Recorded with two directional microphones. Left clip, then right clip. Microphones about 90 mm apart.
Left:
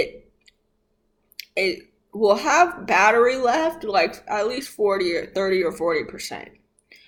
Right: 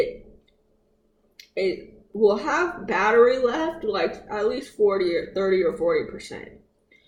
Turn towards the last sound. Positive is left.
turn(degrees=15)  # may be behind; listen again after turning